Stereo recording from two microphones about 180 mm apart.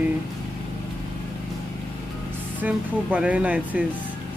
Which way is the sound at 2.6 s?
10° right (ahead or behind).